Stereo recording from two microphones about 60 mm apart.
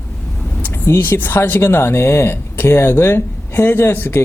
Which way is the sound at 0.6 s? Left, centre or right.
Left.